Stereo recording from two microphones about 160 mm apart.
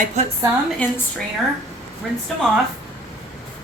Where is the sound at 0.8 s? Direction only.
10° left (ahead or behind).